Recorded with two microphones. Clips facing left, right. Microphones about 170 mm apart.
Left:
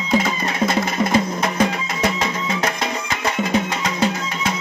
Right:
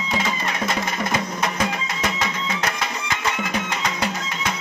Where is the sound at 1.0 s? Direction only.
30° left (ahead or behind).